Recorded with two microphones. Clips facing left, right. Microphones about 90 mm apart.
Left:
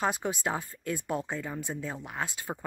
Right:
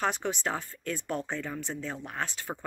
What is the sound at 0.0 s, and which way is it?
Speech, 15° left (ahead or behind).